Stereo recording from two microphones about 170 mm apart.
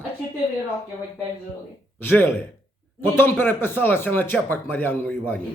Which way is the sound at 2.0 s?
15° left (ahead or behind).